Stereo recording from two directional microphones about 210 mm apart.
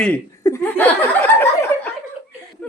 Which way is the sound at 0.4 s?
10° left (ahead or behind).